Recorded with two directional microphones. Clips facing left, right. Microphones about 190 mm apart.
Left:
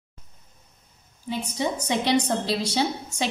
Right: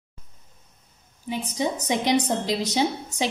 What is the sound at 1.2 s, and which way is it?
A woman's voice, 15° right (ahead or behind).